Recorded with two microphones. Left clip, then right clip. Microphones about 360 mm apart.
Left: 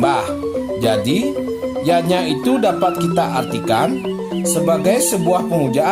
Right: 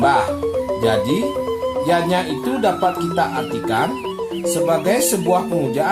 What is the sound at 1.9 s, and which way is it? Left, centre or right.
Speech, left.